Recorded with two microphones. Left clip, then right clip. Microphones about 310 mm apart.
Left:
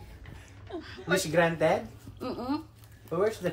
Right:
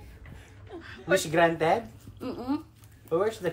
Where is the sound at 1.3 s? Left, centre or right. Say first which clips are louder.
Right 1 dB; centre.